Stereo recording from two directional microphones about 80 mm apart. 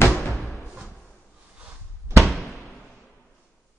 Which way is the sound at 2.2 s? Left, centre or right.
Centre.